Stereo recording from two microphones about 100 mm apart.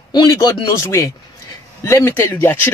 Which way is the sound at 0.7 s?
25° left (ahead or behind).